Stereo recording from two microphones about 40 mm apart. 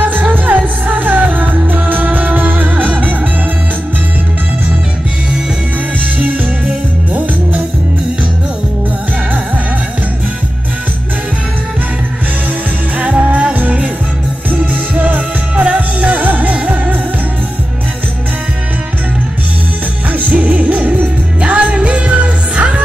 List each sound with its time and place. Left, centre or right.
0.3 s music: right
6.1 s music: right
13.0 s music: right
20.2 s music: right